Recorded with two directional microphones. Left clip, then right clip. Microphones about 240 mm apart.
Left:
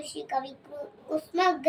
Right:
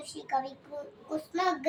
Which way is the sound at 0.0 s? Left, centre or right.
Centre.